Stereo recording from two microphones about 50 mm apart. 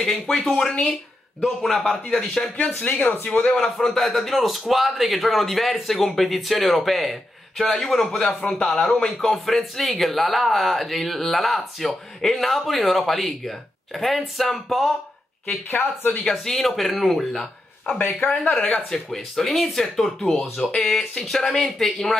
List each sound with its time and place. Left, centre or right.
0.0 s speech: centre
2.8 s speech: left
3.5 s speech: centre
15.7 s speech: left
16.1 s speech: centre
16.5 s speech: centre
18.0 s speech: left
18.5 s speech: left
18.9 s speech: centre